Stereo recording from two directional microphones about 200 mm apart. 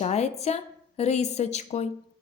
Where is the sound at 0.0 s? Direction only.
35° left (ahead or behind).